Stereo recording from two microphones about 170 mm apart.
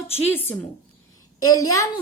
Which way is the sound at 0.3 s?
15° left (ahead or behind).